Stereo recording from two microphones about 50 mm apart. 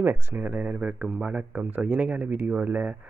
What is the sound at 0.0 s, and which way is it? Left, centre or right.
Speech, right.